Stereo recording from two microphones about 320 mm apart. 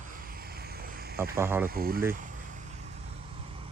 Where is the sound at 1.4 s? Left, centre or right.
Centre.